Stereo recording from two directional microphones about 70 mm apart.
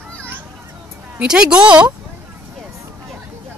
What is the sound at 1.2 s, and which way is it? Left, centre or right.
Speech, centre.